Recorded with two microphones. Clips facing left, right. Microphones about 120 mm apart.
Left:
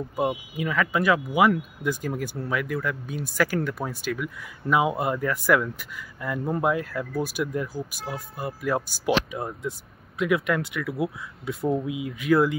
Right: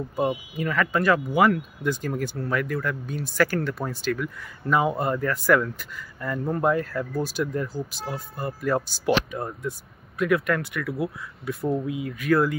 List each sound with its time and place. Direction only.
0.1 s speech: 5° left (ahead or behind)